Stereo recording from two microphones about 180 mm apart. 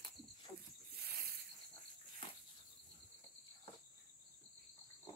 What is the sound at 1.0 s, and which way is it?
Snake, 60° right (ahead or behind).